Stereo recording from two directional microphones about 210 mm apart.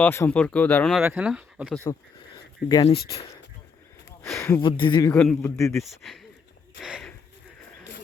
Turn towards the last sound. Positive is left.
turn(degrees=0)  # may be behind; listen again after turning